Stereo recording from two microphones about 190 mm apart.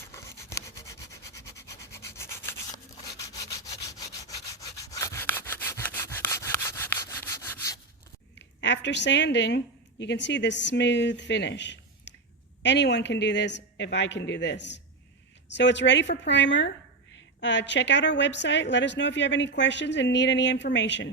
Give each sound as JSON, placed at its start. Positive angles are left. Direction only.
{"t": 0.5, "sound": "rub", "side_deg": 15}
{"t": 4.5, "sound": "wood", "side_deg": 15}
{"t": 8.4, "sound": "a sound", "side_deg": 70}
{"t": 10.0, "sound": "a woman's voice", "side_deg": 70}